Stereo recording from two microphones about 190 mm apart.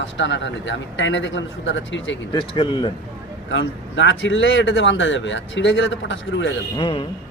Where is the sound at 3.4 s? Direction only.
75° left (ahead or behind).